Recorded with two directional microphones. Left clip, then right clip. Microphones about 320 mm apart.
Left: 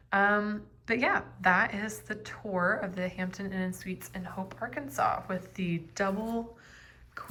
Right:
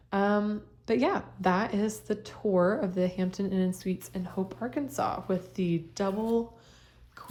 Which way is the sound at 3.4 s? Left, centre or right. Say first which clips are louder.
Right 5 dB; right.